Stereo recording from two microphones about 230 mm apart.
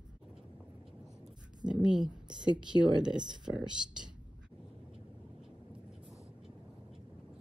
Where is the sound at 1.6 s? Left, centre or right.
Centre.